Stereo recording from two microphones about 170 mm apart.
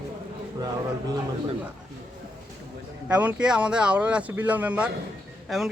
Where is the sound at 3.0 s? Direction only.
5° right (ahead or behind).